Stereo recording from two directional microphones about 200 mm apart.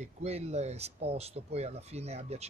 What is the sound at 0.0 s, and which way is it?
Speech, 30° right (ahead or behind).